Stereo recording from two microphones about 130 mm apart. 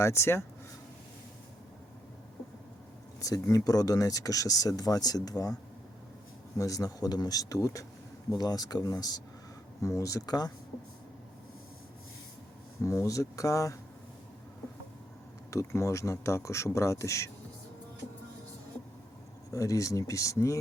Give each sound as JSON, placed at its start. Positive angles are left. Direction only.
{"t": 0.0, "sound": "speech", "side_deg": 20}
{"t": 3.2, "sound": "speech", "side_deg": 25}
{"t": 6.6, "sound": "speech", "side_deg": 25}
{"t": 12.8, "sound": "speech", "side_deg": 25}
{"t": 15.4, "sound": "speech", "side_deg": 25}
{"t": 19.5, "sound": "speech", "side_deg": 25}